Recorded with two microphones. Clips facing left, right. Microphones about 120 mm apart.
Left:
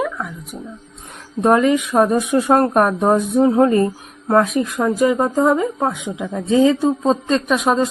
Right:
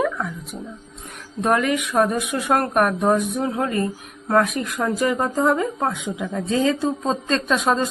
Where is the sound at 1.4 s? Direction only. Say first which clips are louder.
Left 6 dB; 25° left (ahead or behind).